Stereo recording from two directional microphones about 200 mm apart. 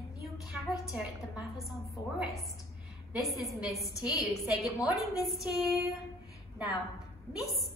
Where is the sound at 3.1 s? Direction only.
Centre (ahead or behind).